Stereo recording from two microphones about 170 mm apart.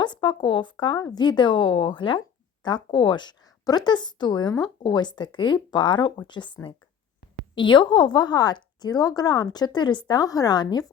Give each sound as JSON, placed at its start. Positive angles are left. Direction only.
{"t": 0.0, "sound": "a woman's voice", "side_deg": 25}